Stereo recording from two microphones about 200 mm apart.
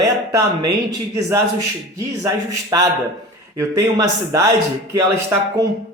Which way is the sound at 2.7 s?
20° right (ahead or behind).